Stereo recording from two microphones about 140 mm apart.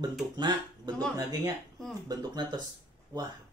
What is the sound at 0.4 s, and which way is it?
A woman's voice, 30° right (ahead or behind).